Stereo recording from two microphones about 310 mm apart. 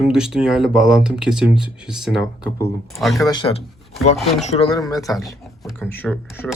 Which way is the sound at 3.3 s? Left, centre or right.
Centre.